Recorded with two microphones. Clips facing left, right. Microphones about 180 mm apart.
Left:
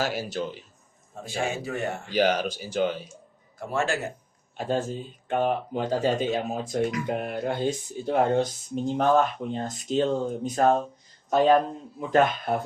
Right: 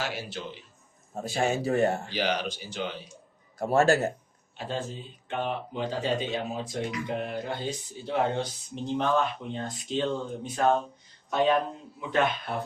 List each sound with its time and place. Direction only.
0.0 s a man's voice: 40° left (ahead or behind)
1.1 s speech: 40° right (ahead or behind)
2.0 s speech: 45° left (ahead or behind)
3.6 s speech: 40° right (ahead or behind)
4.5 s speech: 45° left (ahead or behind)